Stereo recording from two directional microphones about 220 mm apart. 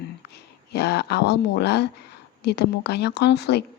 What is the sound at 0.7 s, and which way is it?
Speech, 50° left (ahead or behind).